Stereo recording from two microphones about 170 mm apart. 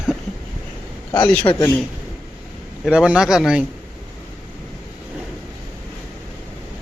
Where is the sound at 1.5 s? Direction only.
30° left (ahead or behind).